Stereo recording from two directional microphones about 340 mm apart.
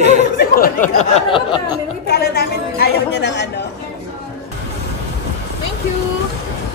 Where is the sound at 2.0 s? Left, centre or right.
Left.